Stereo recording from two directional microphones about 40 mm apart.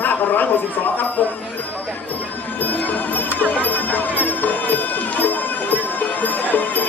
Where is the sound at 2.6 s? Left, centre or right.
Left.